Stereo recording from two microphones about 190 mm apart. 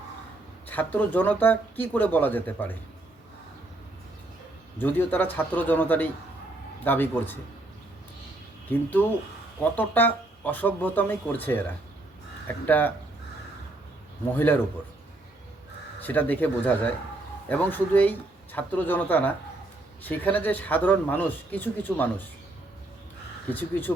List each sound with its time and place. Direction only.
0.7 s speech: 10° left (ahead or behind)
4.8 s speech: 10° left (ahead or behind)
9.7 s speech: 10° left (ahead or behind)
12.6 s speech: 10° left (ahead or behind)
14.3 s speech: 10° left (ahead or behind)
16.0 s speech: 10° left (ahead or behind)
23.5 s speech: 10° left (ahead or behind)